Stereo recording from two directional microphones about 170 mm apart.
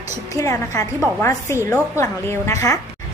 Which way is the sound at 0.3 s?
20° left (ahead or behind).